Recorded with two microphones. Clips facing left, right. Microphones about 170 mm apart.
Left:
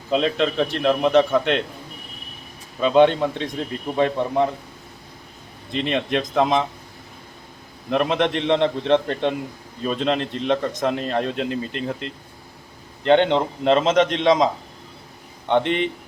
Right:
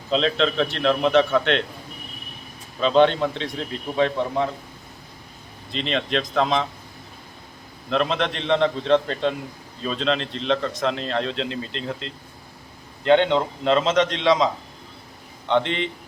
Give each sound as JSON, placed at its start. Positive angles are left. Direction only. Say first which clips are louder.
{"t": 0.1, "sound": "a man's voice", "louder": "left 1 dB", "side_deg": 10}
{"t": 2.8, "sound": "a man's voice", "louder": "left 2 dB", "side_deg": 10}
{"t": 5.9, "sound": "a man's voice", "louder": "left 1 dB", "side_deg": 15}
{"t": 7.9, "sound": "a man's voice", "louder": "left 3 dB", "side_deg": 10}
{"t": 15.4, "sound": "a man's voice", "louder": "left 2 dB", "side_deg": 15}